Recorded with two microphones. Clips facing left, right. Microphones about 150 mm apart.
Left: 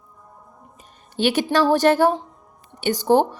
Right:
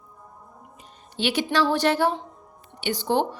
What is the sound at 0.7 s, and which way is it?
A woman's voice, 45° left (ahead or behind).